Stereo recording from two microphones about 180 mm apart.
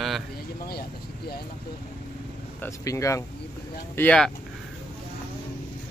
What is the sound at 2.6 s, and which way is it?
Speech, 15° left (ahead or behind).